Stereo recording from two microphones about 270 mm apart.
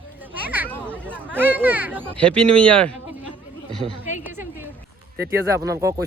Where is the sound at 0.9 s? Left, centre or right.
Centre.